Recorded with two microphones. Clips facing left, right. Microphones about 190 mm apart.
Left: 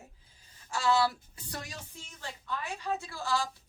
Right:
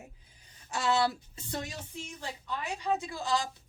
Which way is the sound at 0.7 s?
20° right (ahead or behind).